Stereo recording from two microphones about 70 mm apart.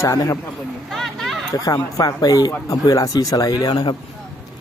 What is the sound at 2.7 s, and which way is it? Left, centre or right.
Speech, left.